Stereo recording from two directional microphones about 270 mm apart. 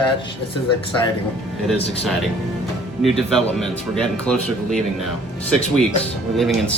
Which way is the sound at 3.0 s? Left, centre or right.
Centre.